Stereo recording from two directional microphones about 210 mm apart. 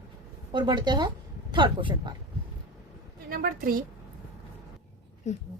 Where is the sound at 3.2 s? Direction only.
45° right (ahead or behind).